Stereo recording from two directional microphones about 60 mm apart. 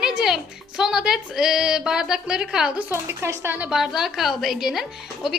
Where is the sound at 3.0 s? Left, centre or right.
Right.